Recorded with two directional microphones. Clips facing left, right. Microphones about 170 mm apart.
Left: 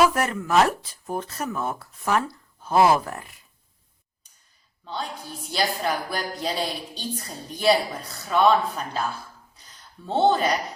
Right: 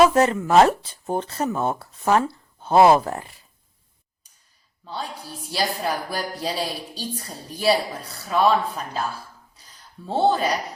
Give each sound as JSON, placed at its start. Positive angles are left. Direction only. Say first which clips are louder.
{"t": 0.0, "sound": "speech", "louder": "right 5 dB", "side_deg": -25}
{"t": 5.5, "sound": "a woman's voice", "louder": "even", "side_deg": -10}
{"t": 10.1, "sound": "a woman's voice", "louder": "even", "side_deg": -5}